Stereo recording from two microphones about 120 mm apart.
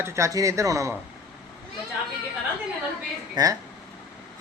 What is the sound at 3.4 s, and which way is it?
Speech, 35° right (ahead or behind).